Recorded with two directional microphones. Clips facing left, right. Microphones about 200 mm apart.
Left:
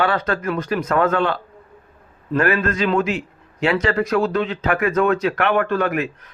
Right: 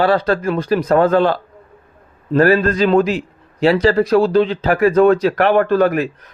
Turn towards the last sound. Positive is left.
turn(degrees=-35)  # may be behind; listen again after turning